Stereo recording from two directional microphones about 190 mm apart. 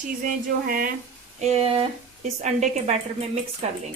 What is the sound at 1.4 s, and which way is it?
A woman's voice, 35° right (ahead or behind).